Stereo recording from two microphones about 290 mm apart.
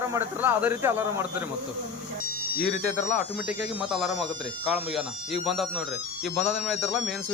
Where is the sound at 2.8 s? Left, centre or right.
Left.